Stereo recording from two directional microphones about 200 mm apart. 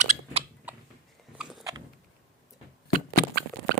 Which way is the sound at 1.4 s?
5° right (ahead or behind).